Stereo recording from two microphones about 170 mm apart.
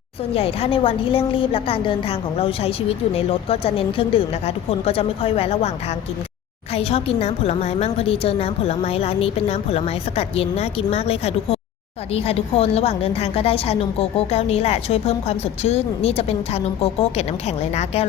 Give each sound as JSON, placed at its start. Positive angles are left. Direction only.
{"t": 0.3, "sound": "a woman's voice", "side_deg": 35}
{"t": 6.7, "sound": "a woman's voice", "side_deg": 35}